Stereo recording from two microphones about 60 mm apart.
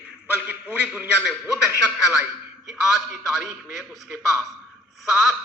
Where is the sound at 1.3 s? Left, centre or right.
Centre.